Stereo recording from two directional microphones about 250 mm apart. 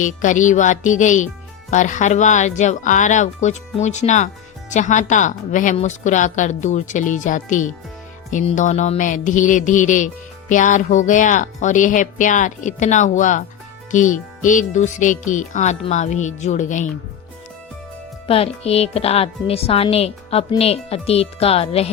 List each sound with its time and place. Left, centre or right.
0.0 s speech: left
18.3 s speech: left